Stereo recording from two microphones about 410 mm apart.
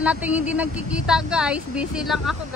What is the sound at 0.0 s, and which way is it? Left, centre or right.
A woman's voice, centre.